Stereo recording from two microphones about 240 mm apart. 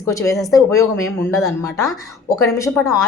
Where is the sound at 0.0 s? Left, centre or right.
Centre.